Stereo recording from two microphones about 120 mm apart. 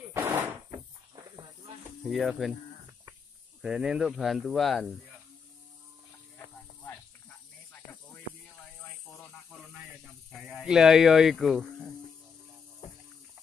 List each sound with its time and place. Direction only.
0.1 s door: 15° right (ahead or behind)
2.0 s speech: centre (ahead or behind)
3.6 s speech: 5° right (ahead or behind)
6.3 s a sound: 15° left (ahead or behind)
10.3 s speech: centre (ahead or behind)